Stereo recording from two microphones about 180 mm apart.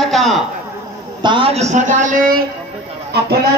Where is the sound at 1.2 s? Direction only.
30° right (ahead or behind); by 2.4 s 50° right (ahead or behind).